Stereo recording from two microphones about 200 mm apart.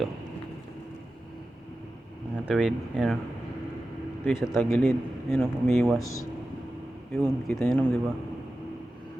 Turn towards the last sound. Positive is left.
turn(degrees=5)  # may be behind; listen again after turning